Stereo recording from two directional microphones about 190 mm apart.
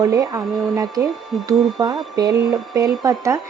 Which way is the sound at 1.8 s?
20° right (ahead or behind).